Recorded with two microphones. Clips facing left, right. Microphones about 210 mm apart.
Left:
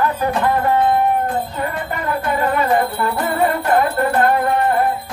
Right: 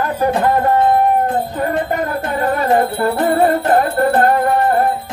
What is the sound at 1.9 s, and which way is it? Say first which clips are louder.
Music: right 1 dB; 40° right (ahead or behind).